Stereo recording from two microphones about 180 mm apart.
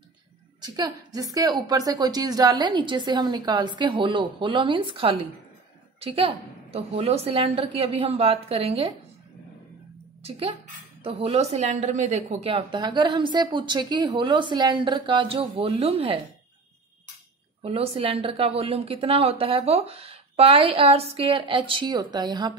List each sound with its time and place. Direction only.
0.6 s a woman's voice: 20° right (ahead or behind)
11.1 s a woman's voice: 35° right (ahead or behind)
17.6 s a woman's voice: 30° right (ahead or behind)